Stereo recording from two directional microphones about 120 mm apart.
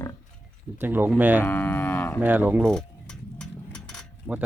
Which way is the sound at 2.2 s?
15° right (ahead or behind).